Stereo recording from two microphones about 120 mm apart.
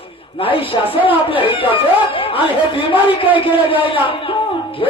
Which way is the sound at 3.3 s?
45° left (ahead or behind).